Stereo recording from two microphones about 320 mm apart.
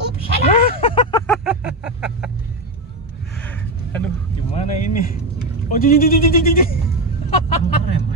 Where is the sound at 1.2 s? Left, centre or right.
Centre.